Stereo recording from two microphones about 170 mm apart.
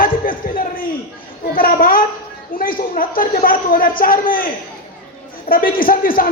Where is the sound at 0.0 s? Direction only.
55° left (ahead or behind).